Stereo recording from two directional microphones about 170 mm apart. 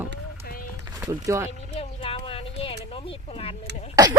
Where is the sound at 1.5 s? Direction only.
35° left (ahead or behind).